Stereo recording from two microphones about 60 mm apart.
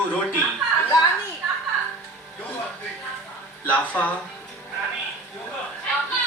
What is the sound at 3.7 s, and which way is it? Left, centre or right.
Speech, left.